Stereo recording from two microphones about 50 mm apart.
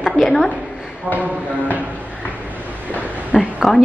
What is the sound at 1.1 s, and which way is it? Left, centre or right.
Speech, right.